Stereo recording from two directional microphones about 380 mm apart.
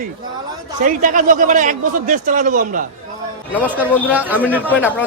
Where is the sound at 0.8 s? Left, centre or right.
Right.